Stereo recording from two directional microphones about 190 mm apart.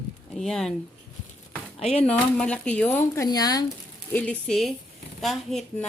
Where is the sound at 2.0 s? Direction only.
5° left (ahead or behind).